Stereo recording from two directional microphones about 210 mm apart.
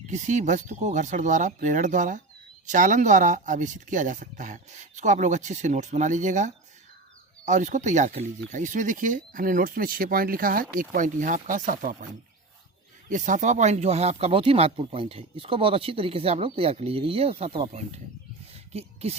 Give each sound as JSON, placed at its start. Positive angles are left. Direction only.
{"t": 0.1, "sound": "speech", "side_deg": -35}
{"t": 13.1, "sound": "speech", "side_deg": -40}